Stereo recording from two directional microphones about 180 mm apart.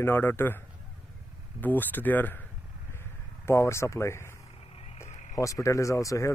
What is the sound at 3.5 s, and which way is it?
Speech, 15° left (ahead or behind).